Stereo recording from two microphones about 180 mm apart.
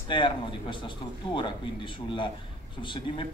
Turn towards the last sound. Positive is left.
turn(degrees=25)  # may be behind; listen again after turning